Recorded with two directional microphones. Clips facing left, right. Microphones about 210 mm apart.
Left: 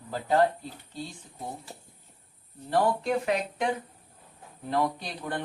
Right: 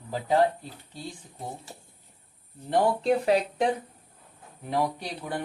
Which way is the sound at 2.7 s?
25° right (ahead or behind).